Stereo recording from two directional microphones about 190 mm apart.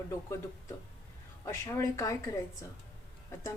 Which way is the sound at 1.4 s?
15° left (ahead or behind).